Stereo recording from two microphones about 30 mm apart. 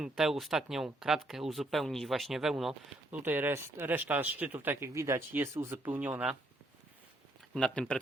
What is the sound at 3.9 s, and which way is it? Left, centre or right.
Speech, right.